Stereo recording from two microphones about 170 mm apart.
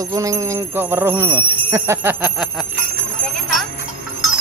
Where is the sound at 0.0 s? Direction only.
20° right (ahead or behind); by 2.6 s 5° right (ahead or behind).